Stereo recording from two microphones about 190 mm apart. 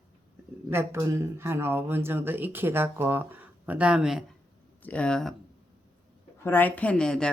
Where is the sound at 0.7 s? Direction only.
15° right (ahead or behind).